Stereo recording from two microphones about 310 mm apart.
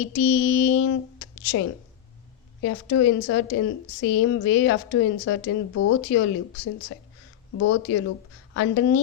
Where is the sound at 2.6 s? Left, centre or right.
Left.